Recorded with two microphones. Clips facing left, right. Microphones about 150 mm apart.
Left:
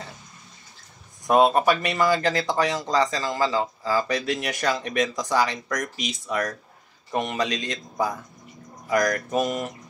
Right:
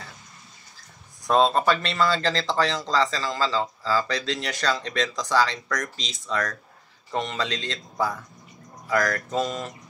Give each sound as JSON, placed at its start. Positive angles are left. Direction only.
{"t": 1.2, "sound": "speech", "side_deg": 15}